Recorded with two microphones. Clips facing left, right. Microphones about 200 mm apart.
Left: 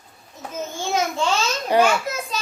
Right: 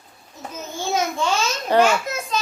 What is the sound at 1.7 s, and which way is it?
Speech, 15° left (ahead or behind).